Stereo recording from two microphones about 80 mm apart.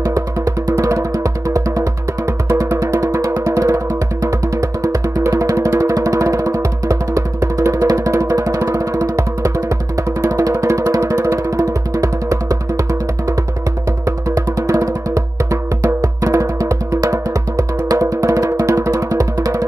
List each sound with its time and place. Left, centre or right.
0.0 s music: right
14.0 s music: right